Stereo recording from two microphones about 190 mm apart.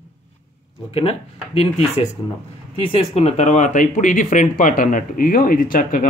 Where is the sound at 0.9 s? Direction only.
30° left (ahead or behind).